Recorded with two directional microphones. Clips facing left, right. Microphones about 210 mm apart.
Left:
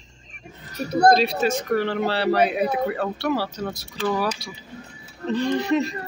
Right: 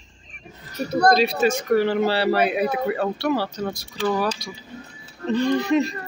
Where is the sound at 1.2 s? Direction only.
Centre (ahead or behind).